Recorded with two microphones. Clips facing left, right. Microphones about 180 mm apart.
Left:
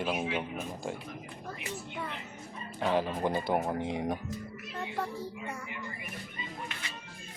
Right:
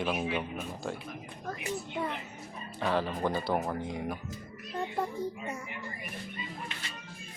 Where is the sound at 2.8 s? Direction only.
15° left (ahead or behind).